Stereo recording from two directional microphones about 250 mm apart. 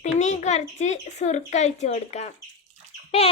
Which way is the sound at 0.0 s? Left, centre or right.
Left.